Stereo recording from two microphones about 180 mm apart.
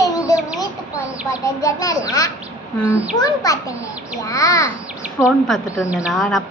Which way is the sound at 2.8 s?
10° right (ahead or behind).